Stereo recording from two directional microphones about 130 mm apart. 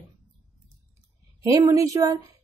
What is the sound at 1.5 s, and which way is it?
Speech, 25° right (ahead or behind).